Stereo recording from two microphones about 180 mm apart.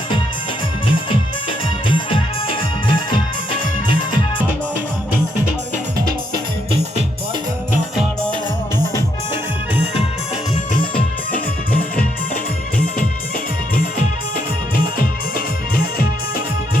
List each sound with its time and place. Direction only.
1.9 s music: 30° left (ahead or behind)
11.3 s music: 50° left (ahead or behind)
14.3 s music: 55° left (ahead or behind)